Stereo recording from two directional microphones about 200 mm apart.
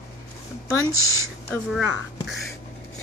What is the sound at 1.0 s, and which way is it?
Speech, 15° left (ahead or behind).